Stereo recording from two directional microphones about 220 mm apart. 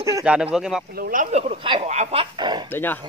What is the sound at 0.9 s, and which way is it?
Speech, 40° right (ahead or behind).